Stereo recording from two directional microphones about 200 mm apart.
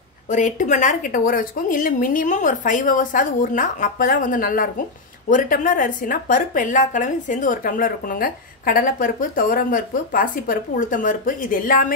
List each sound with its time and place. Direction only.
0.3 s a woman's voice: 40° left (ahead or behind)